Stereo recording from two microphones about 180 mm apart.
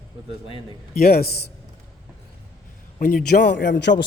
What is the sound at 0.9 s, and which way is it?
Speech, 55° left (ahead or behind).